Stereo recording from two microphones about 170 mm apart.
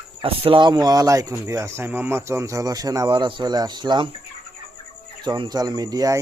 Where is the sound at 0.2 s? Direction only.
30° right (ahead or behind).